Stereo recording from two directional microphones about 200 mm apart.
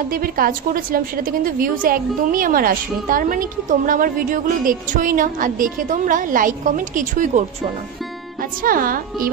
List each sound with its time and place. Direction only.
0.1 s a woman's voice: 45° right (ahead or behind)